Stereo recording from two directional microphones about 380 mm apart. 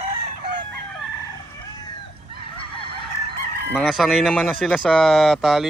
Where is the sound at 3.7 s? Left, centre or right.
Centre.